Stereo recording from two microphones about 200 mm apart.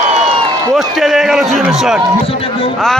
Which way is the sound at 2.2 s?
30° left (ahead or behind).